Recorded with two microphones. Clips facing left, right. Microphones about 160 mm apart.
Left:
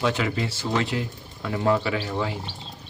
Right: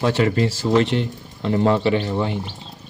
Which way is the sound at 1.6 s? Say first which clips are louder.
Right 4 dB; 25° right (ahead or behind).